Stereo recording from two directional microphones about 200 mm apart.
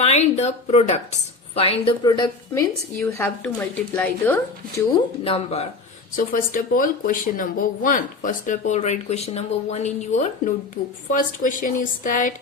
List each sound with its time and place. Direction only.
0.0 s a woman's voice: 35° left (ahead or behind); by 4.4 s 10° left (ahead or behind)
5.2 s speech: 30° left (ahead or behind)
6.1 s speech: 45° left (ahead or behind)